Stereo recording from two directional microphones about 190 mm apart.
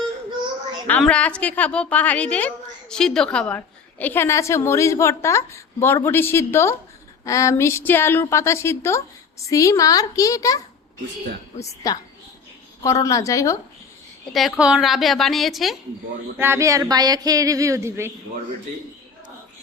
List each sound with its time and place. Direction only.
0.9 s a woman's voice: 5° left (ahead or behind)
11.6 s a woman's voice: 15° left (ahead or behind)
14.3 s a woman's voice: centre (ahead or behind)
16.4 s speech: 15° right (ahead or behind)